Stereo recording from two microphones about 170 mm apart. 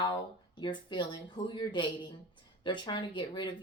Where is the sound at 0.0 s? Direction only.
25° left (ahead or behind).